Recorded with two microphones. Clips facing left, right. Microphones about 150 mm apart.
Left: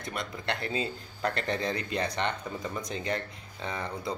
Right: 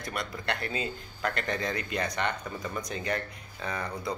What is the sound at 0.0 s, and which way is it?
A man's voice, 25° left (ahead or behind).